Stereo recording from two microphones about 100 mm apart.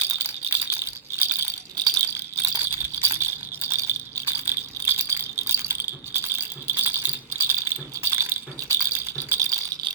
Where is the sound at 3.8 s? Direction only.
25° right (ahead or behind).